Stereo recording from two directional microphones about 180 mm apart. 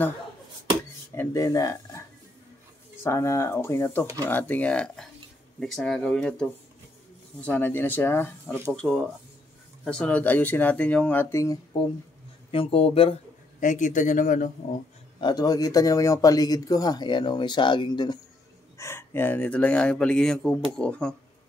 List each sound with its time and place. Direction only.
1.1 s speech: 15° left (ahead or behind)
12.4 s speech: 30° left (ahead or behind)
13.6 s speech: 45° left (ahead or behind)
15.1 s speech: 20° left (ahead or behind)
18.8 s speech: 15° left (ahead or behind)